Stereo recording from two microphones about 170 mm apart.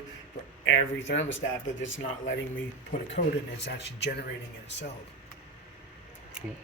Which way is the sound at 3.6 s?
75° left (ahead or behind).